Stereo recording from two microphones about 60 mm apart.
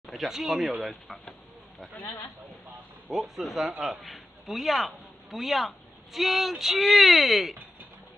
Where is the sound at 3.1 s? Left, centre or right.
Centre.